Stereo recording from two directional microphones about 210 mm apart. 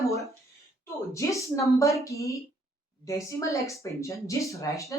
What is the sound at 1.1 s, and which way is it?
Speech, 15° left (ahead or behind).